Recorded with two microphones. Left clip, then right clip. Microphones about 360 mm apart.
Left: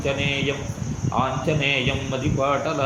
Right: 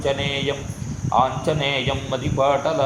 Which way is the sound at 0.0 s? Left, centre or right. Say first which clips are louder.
Right 1 dB; centre.